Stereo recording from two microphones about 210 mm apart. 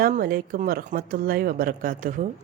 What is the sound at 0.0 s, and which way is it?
A woman's voice, 45° right (ahead or behind).